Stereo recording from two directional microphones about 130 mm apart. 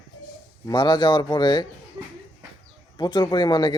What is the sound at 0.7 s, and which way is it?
Speech, 35° left (ahead or behind).